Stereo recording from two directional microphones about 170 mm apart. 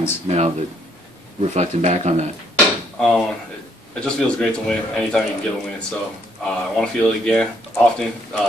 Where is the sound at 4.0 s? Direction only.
5° left (ahead or behind).